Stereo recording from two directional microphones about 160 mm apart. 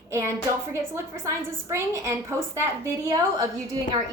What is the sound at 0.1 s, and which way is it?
A woman's voice, 15° right (ahead or behind).